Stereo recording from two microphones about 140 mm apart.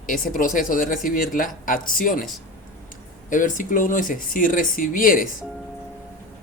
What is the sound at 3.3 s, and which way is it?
Speech, 70° left (ahead or behind).